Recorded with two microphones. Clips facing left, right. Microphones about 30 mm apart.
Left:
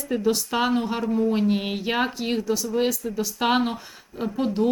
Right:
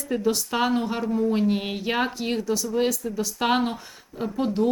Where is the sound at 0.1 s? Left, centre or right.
Centre.